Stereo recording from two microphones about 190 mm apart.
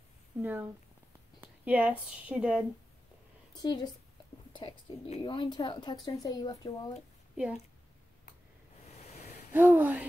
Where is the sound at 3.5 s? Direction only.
20° left (ahead or behind).